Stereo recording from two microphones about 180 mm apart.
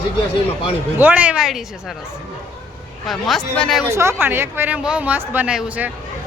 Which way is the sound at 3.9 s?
15° right (ahead or behind).